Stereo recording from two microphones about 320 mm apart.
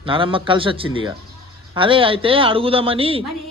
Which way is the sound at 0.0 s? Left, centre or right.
Centre.